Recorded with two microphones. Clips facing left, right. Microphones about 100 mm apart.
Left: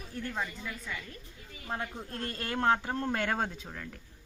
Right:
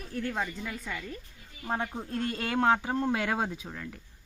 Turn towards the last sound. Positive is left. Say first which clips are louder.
# right 2 dB
turn(degrees=-5)  # may be behind; listen again after turning